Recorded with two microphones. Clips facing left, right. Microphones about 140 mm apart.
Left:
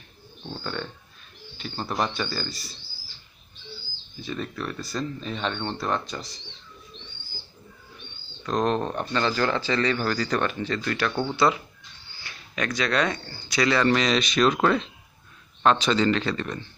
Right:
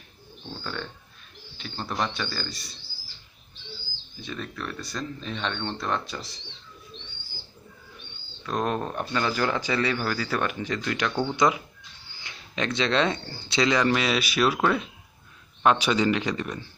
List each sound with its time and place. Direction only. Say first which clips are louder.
1.6 s speech: left 2 dB; 5° left (ahead or behind)
4.2 s speech: left 3 dB; centre (ahead or behind)
8.5 s speech: left 3 dB; 5° right (ahead or behind)